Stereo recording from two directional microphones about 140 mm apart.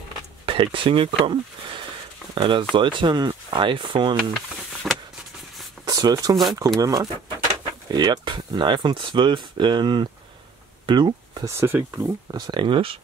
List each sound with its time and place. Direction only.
0.5 s speech: 40° right (ahead or behind)
4.9 s a sound: centre (ahead or behind)
5.9 s speech: 25° right (ahead or behind)
11.5 s speech: 15° right (ahead or behind)
12.4 s speech: 35° right (ahead or behind)